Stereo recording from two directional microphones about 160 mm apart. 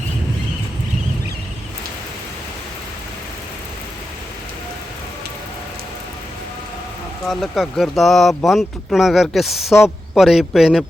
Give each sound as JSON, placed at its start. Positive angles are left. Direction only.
{"t": 7.3, "sound": "speech", "side_deg": 0}